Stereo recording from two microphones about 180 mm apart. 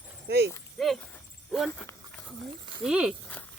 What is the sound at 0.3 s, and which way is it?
Speech, 65° right (ahead or behind).